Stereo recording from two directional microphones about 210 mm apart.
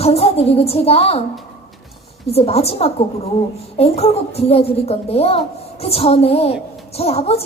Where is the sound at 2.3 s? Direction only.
30° left (ahead or behind).